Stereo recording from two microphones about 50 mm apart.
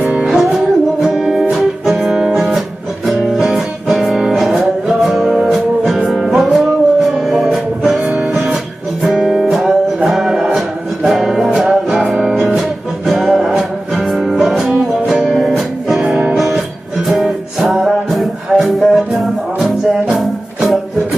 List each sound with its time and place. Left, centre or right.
0.3 s music: centre